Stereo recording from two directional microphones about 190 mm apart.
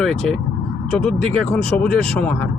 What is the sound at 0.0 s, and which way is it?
Speech, centre (ahead or behind).